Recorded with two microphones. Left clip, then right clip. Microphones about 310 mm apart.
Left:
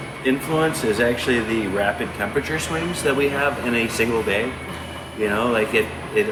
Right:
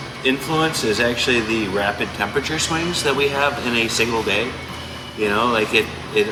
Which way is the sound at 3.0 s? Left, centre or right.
Centre.